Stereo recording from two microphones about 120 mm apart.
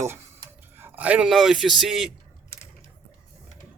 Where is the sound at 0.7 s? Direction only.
15° right (ahead or behind).